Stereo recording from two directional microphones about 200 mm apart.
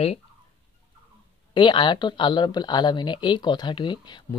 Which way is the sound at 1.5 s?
25° left (ahead or behind).